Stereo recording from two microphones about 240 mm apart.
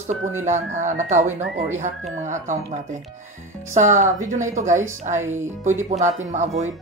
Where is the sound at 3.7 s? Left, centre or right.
Right.